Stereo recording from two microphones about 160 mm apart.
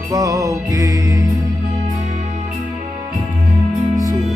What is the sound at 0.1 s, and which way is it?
Music, 20° right (ahead or behind).